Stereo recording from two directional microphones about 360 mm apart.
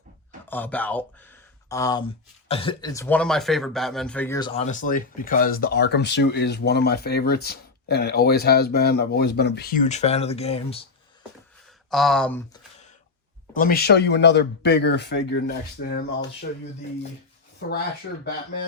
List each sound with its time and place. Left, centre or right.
0.4 s a man's voice: centre
11.9 s speech: centre
13.5 s a man's voice: left